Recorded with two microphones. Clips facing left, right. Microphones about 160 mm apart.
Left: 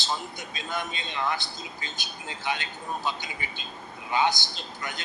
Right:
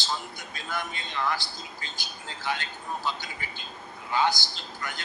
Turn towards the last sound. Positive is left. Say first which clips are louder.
# left 1 dB
turn(degrees=20)  # may be behind; listen again after turning